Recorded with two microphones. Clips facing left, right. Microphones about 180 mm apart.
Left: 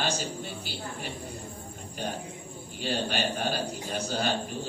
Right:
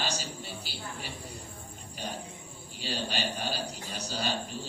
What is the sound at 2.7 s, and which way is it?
A man's voice, 50° left (ahead or behind).